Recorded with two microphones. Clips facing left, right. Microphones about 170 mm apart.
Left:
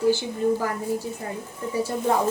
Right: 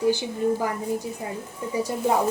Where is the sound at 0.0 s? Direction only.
15° right (ahead or behind).